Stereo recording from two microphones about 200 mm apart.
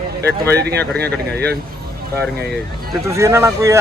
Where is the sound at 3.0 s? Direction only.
15° right (ahead or behind).